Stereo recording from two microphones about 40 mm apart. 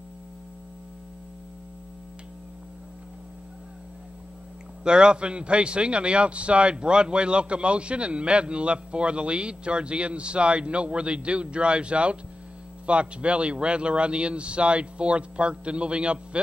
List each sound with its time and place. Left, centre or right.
4.8 s a man's voice: right